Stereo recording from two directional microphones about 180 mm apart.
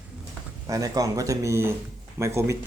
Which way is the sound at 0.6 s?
20° right (ahead or behind).